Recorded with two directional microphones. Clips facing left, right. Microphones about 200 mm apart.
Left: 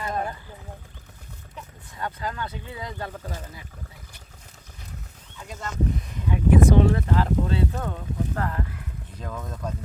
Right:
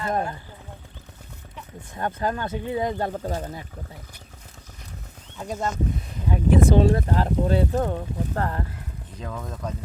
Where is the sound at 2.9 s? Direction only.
30° right (ahead or behind).